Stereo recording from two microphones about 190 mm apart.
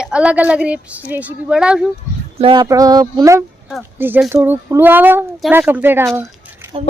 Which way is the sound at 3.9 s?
10° right (ahead or behind).